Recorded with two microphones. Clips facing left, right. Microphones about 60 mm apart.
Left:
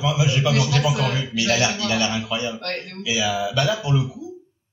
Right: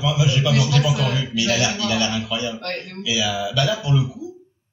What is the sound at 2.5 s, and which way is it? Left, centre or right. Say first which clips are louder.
Speech: even; centre.